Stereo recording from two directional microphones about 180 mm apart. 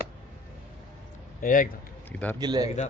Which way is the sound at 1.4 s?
50° left (ahead or behind).